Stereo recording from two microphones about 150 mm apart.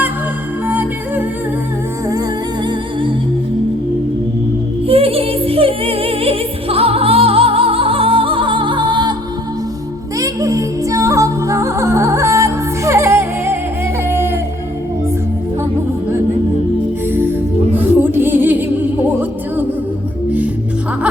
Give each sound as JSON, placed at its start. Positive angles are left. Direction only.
{"t": 0.7, "sound": "music", "side_deg": -10}
{"t": 2.6, "sound": "music", "side_deg": -35}
{"t": 4.9, "sound": "music", "side_deg": -40}
{"t": 10.2, "sound": "music", "side_deg": -20}
{"t": 14.1, "sound": "a sound", "side_deg": -15}
{"t": 17.7, "sound": "music", "side_deg": -15}